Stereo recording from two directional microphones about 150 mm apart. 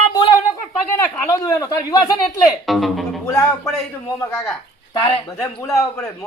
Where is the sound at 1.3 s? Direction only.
25° left (ahead or behind).